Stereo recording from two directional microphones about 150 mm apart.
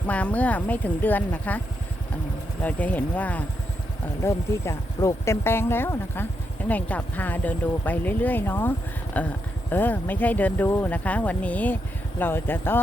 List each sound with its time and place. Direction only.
0.1 s speech: 10° left (ahead or behind)